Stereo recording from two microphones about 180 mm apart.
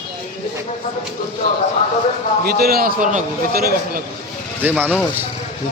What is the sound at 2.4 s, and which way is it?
A man's voice, 60° right (ahead or behind).